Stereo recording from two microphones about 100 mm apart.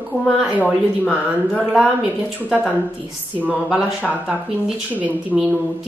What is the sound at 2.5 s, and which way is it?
Speech, 10° right (ahead or behind).